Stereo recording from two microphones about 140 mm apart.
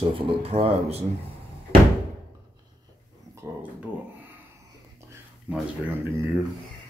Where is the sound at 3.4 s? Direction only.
20° right (ahead or behind).